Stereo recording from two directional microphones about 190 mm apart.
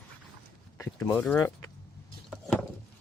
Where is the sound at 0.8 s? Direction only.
15° left (ahead or behind).